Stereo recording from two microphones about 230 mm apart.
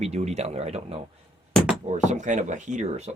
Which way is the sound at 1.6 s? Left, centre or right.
Centre.